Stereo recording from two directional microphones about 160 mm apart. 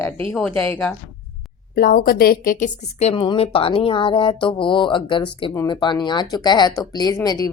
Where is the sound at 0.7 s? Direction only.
10° left (ahead or behind).